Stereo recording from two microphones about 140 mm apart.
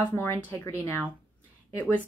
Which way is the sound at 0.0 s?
15° left (ahead or behind).